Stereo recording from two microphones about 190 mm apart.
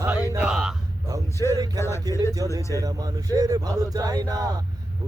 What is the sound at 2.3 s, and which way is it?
Speech, 20° right (ahead or behind).